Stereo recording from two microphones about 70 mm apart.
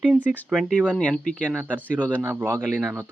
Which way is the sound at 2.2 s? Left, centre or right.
Right.